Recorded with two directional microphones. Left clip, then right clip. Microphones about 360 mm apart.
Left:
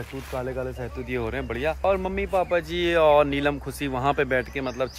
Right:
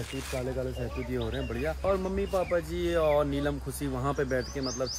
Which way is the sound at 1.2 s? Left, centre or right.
Centre.